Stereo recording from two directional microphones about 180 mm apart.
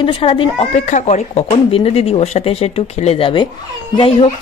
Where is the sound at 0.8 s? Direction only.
40° left (ahead or behind).